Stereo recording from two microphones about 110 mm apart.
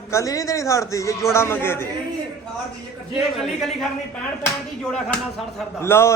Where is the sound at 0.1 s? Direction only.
30° left (ahead or behind).